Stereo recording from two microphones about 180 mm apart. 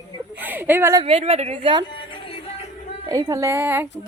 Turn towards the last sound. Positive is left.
turn(degrees=-10)  # may be behind; listen again after turning